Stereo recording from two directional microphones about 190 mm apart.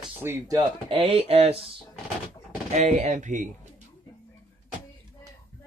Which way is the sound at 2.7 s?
40° right (ahead or behind).